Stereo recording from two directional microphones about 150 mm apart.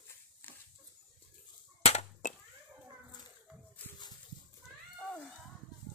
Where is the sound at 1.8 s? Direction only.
45° left (ahead or behind).